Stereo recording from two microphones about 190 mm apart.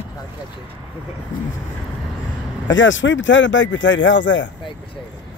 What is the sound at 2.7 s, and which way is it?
Speech, 80° left.